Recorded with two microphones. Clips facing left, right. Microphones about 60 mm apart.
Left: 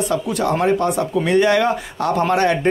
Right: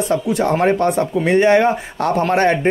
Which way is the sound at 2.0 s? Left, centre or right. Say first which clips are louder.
Right 2 dB; right.